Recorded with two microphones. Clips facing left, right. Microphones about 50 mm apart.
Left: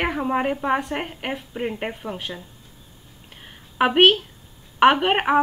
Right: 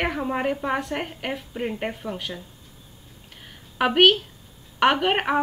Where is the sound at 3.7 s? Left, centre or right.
Centre.